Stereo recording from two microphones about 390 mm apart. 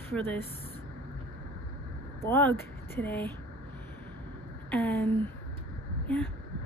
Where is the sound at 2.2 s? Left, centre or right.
Centre.